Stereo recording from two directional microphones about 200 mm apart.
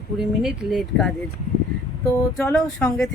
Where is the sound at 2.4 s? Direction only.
5° left (ahead or behind).